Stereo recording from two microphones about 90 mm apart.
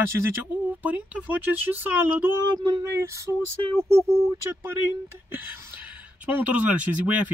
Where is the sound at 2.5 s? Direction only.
50° right (ahead or behind).